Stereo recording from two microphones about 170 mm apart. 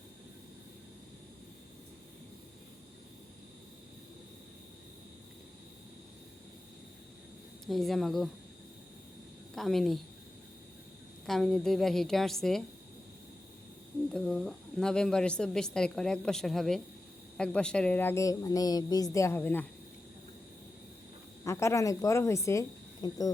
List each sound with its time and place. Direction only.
7.7 s a woman's voice: centre (ahead or behind)
9.6 s a woman's voice: centre (ahead or behind)
11.3 s a woman's voice: centre (ahead or behind)
14.1 s a woman's voice: 5° left (ahead or behind)
21.4 s a woman's voice: 15° left (ahead or behind)